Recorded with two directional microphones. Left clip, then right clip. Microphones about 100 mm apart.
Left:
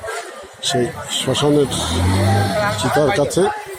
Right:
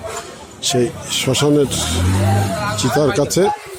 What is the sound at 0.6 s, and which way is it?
Speech, 60° right (ahead or behind).